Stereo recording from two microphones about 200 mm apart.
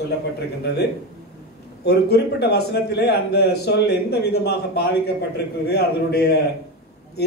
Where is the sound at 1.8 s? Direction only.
55° left (ahead or behind).